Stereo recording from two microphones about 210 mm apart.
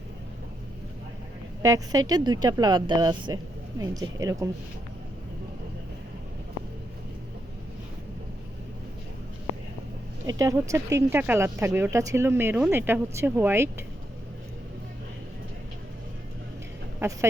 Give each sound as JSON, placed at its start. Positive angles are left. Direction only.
{"t": 1.6, "sound": "speech", "side_deg": -15}
{"t": 10.2, "sound": "speech", "side_deg": -15}
{"t": 17.0, "sound": "speech", "side_deg": -15}